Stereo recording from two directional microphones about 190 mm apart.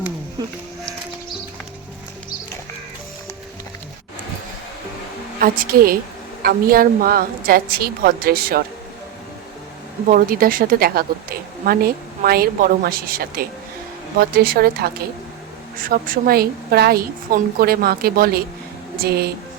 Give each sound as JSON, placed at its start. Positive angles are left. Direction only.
{"t": 0.4, "sound": "sheep", "side_deg": -20}
{"t": 5.4, "sound": "a woman's voice", "side_deg": -50}
{"t": 10.1, "sound": "a woman's voice", "side_deg": -50}